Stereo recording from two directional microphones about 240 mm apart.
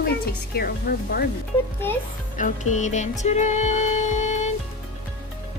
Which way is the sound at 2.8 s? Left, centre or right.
Left.